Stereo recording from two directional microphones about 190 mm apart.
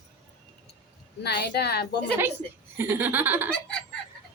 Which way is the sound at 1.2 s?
60° left (ahead or behind).